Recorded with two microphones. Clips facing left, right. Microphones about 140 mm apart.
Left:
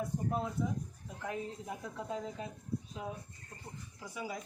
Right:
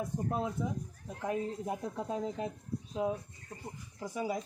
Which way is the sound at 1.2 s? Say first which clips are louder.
Right 6 dB; 30° right (ahead or behind).